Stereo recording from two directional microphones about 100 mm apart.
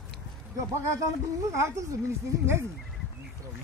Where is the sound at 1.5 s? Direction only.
25° right (ahead or behind).